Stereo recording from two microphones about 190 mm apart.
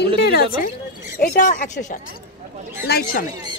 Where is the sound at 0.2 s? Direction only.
55° left (ahead or behind).